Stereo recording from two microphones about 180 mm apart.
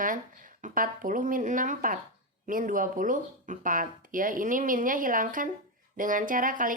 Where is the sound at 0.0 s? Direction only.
50° right (ahead or behind).